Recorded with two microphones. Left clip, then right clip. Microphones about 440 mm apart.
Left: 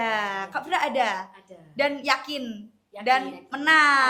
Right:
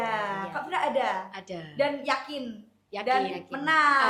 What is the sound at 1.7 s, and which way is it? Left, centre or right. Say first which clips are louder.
A woman's voice: left 3 dB; left.